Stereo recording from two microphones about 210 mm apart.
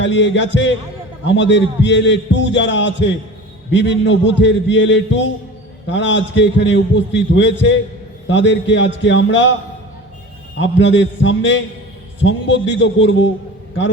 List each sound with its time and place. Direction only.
0.0 s a man's voice: 60° left (ahead or behind)
10.6 s a man's voice: 60° left (ahead or behind)